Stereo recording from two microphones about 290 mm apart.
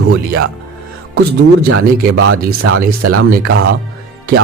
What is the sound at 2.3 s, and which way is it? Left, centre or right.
Speech, right.